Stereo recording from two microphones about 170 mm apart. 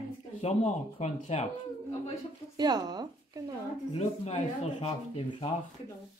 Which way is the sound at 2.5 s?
25° right (ahead or behind).